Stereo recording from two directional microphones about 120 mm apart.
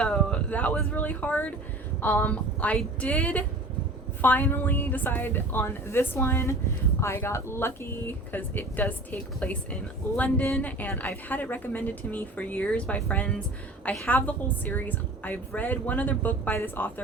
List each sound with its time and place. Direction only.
0.0 s a woman's voice: 5° left (ahead or behind)